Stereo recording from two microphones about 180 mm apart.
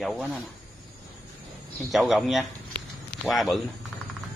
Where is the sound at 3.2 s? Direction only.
Centre (ahead or behind).